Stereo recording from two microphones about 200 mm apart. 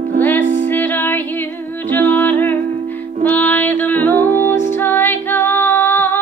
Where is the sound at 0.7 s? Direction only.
10° left (ahead or behind).